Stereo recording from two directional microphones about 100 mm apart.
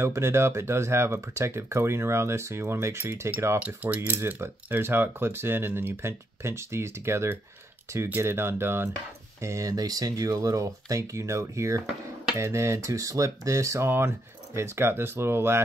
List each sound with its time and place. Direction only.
0.0 s speech: 25° right (ahead or behind)
3.5 s speech: 15° right (ahead or behind)